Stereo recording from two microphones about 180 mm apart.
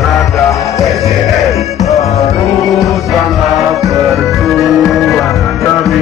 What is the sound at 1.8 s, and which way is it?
Music, 35° left (ahead or behind).